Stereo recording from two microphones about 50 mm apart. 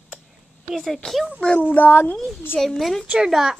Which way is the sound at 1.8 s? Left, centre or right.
Left.